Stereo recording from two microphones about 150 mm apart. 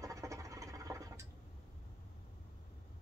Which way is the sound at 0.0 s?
20° right (ahead or behind).